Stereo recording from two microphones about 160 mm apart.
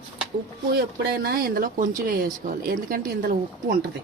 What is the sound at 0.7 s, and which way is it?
Speech, 75° right (ahead or behind).